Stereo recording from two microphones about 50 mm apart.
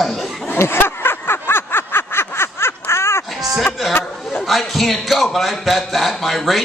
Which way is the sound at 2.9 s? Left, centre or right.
Left.